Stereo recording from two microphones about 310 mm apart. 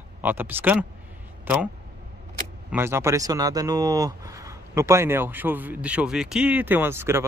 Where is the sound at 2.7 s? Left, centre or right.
Centre.